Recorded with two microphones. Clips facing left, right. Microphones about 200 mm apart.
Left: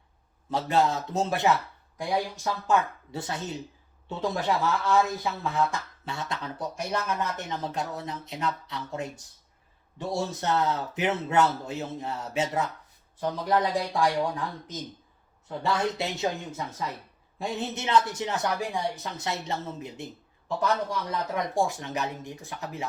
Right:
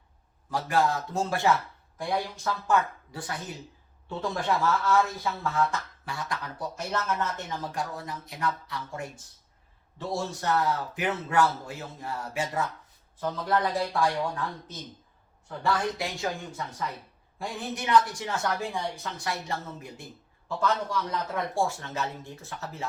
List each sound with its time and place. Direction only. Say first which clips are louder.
0.5 s speech: left 1 dB; 20° left (ahead or behind)
17.3 s speech: left 3 dB; 25° left (ahead or behind)
21.3 s speech: left 2 dB; 15° left (ahead or behind)